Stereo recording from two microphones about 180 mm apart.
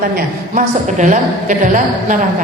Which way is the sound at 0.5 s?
45° right (ahead or behind).